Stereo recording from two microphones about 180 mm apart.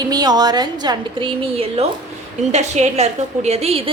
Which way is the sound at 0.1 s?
20° right (ahead or behind).